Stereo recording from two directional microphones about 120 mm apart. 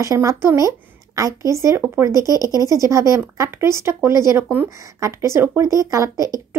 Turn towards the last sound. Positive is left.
turn(degrees=-25)  # may be behind; listen again after turning